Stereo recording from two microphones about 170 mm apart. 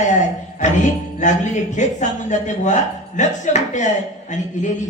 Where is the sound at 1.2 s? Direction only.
45° left (ahead or behind).